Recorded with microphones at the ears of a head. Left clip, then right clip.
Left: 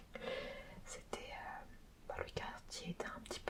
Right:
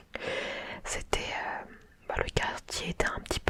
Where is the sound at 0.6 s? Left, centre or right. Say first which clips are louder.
Right 17 dB; right.